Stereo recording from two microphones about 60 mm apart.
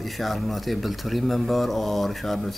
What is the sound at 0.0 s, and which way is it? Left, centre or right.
A man's voice, centre.